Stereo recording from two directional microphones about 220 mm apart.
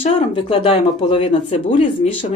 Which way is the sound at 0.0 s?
25° left (ahead or behind).